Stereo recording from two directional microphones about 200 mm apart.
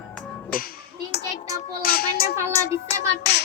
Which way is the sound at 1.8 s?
50° left (ahead or behind).